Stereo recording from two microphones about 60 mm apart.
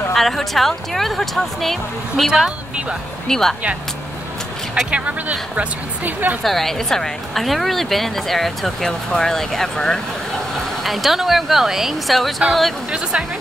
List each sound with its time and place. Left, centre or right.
0.1 s a woman's voice: centre
2.3 s speech: centre
3.3 s speech: centre
4.9 s a woman's voice: right
6.4 s a woman's voice: centre
10.8 s a woman's voice: centre